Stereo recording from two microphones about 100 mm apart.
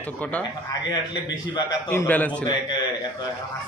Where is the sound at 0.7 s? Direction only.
45° left (ahead or behind).